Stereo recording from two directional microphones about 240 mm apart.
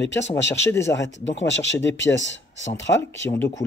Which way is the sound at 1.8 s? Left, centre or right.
Left.